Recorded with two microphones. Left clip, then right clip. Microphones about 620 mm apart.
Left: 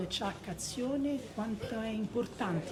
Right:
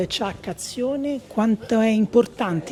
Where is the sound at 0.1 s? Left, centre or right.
Right.